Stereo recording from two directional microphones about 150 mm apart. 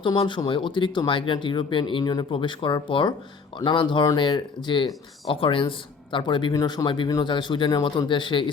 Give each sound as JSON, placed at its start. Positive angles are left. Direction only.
{"t": 0.0, "sound": "speech", "side_deg": 30}